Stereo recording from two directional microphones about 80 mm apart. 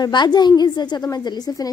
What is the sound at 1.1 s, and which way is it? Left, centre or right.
Speech, left.